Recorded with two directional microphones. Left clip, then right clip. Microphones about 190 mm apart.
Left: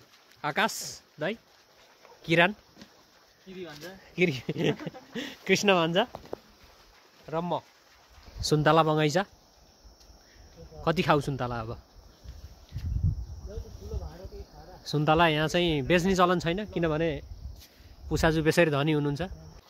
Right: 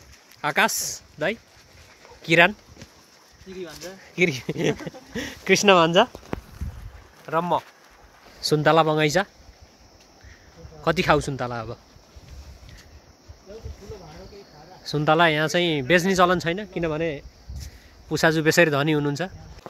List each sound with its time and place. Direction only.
0.4 s speech: centre (ahead or behind)
4.0 s speech: 5° left (ahead or behind); by 6.0 s 20° right (ahead or behind)
7.2 s speech: centre (ahead or behind)
8.4 s speech: 15° left (ahead or behind)
10.8 s speech: 5° left (ahead or behind)
14.8 s speech: 10° left (ahead or behind)
16.5 s speech: 20° left (ahead or behind)
18.0 s speech: 5° left (ahead or behind)